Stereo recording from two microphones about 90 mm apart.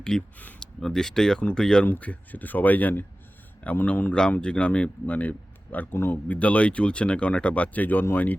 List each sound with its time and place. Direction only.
0.0 s speech: 15° left (ahead or behind)